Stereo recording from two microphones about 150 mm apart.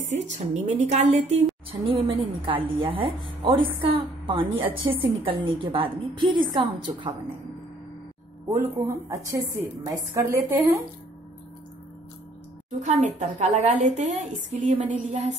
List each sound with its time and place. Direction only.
0.1 s a woman's voice: 50° right (ahead or behind); by 4.6 s 35° right (ahead or behind)
4.6 s a woman's voice: 10° right (ahead or behind)
5.2 s a woman's voice: 35° right (ahead or behind)
8.8 s a woman's voice: 20° right (ahead or behind)
12.8 s a woman's voice: 50° right (ahead or behind)